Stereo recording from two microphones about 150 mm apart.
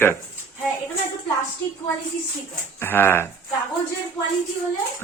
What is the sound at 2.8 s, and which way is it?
Speech, 15° left (ahead or behind).